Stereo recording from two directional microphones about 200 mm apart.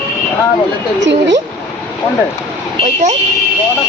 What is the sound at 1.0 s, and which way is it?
Speech, 65° right (ahead or behind).